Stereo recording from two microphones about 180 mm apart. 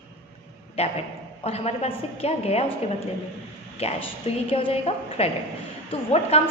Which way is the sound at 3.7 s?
35° left (ahead or behind).